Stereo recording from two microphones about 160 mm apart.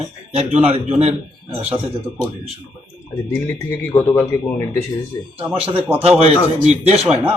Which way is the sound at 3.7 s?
15° left (ahead or behind).